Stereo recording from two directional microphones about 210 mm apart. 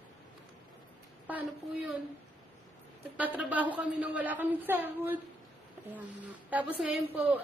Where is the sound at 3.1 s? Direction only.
5° right (ahead or behind).